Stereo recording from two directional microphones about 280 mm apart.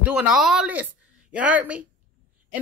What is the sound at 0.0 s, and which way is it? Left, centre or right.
A woman's voice, centre.